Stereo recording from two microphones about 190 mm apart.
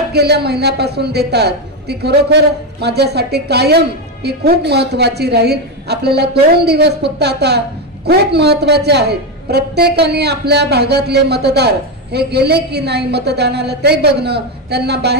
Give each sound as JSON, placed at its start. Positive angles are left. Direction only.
{"t": 0.1, "sound": "a man's voice", "side_deg": -60}